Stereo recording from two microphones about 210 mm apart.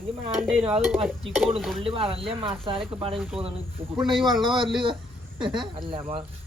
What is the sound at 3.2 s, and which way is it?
Speech, 5° right (ahead or behind).